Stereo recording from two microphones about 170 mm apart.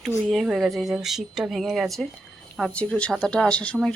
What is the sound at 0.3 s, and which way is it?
Speech, centre (ahead or behind).